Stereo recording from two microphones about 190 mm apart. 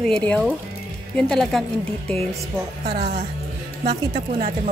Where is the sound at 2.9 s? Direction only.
55° right (ahead or behind).